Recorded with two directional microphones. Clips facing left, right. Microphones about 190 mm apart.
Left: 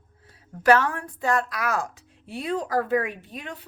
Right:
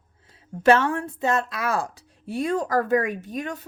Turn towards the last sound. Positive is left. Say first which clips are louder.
# right 7 dB
turn(degrees=-45)  # may be behind; listen again after turning